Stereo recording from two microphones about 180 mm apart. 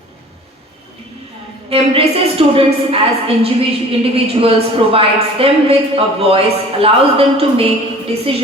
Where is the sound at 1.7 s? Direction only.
30° right (ahead or behind).